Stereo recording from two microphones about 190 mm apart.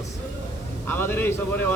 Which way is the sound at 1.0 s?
10° left (ahead or behind).